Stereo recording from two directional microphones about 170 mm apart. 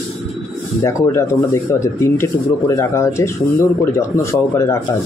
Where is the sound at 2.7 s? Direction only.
15° left (ahead or behind).